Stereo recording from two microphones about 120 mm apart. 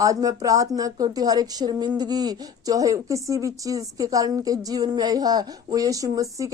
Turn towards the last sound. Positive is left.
turn(degrees=-30)  # may be behind; listen again after turning